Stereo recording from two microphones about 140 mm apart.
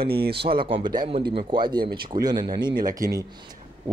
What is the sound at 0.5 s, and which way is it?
Speech, 35° right (ahead or behind).